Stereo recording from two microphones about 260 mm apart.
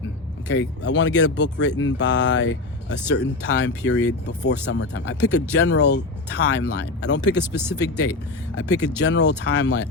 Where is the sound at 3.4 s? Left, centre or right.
Left.